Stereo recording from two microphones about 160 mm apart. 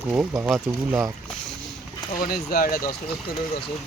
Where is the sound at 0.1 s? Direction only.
15° right (ahead or behind).